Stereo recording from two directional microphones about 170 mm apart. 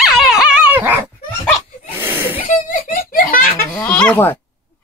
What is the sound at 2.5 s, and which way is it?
Giggle, 50° left (ahead or behind).